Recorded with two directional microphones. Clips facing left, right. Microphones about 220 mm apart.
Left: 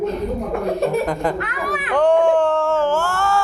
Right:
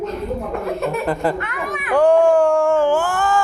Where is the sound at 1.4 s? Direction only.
35° left (ahead or behind).